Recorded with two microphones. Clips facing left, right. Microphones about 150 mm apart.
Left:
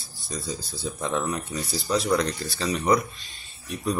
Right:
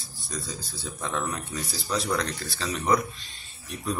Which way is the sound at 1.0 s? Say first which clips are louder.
Left 3 dB; 10° left (ahead or behind).